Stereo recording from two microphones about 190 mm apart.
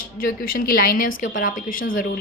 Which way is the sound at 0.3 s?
50° left (ahead or behind).